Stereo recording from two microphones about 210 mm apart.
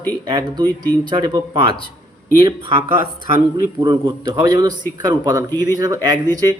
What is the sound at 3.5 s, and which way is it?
Speech, 20° right (ahead or behind).